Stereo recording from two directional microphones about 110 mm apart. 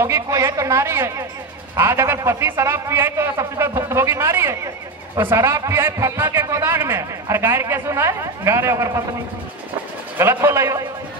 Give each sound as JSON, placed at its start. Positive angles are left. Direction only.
{"t": 0.0, "sound": "a man's voice", "side_deg": -25}
{"t": 10.1, "sound": "a man's voice", "side_deg": -20}